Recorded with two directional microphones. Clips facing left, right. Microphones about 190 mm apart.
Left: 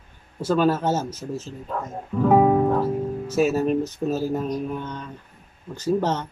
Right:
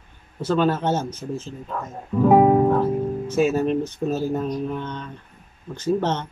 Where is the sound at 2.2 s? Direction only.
15° right (ahead or behind).